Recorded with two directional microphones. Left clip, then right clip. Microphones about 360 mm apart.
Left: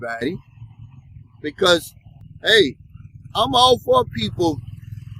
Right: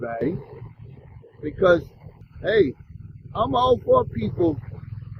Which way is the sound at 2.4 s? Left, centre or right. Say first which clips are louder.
Left 5 dB; centre.